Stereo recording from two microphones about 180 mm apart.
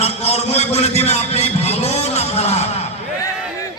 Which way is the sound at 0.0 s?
35° left (ahead or behind).